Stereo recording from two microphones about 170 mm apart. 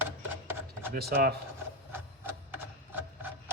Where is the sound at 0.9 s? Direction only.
65° right (ahead or behind).